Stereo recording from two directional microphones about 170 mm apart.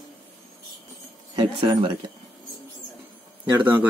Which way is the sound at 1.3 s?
30° right (ahead or behind).